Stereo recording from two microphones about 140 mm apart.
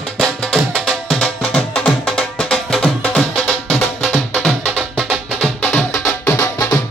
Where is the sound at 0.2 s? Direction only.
5° right (ahead or behind).